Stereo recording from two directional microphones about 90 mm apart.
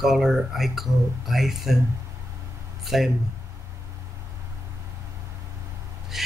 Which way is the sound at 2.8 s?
5° right (ahead or behind).